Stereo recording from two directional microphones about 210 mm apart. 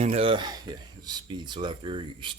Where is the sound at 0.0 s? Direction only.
30° right (ahead or behind).